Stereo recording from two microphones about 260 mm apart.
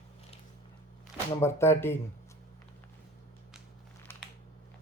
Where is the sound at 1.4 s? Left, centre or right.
Centre.